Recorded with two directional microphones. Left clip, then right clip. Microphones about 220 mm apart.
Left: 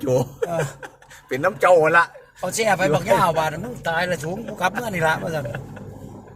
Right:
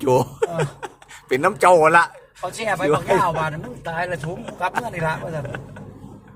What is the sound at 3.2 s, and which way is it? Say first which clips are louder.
Speech: left 2 dB; 50° left (ahead or behind).